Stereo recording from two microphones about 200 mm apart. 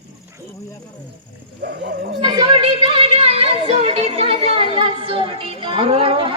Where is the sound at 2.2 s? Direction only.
20° right (ahead or behind).